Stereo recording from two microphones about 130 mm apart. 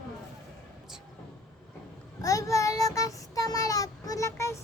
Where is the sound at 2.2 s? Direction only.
25° left (ahead or behind).